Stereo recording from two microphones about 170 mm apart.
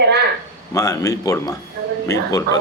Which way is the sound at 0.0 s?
75° right (ahead or behind).